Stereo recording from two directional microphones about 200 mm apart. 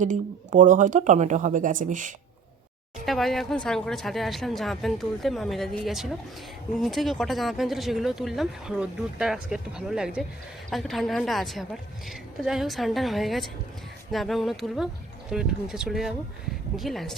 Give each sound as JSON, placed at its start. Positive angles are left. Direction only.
{"t": 0.0, "sound": "speech", "side_deg": -40}
{"t": 3.1, "sound": "speech", "side_deg": 0}